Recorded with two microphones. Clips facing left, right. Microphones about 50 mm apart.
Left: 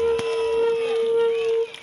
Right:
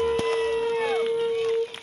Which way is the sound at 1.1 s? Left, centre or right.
Left.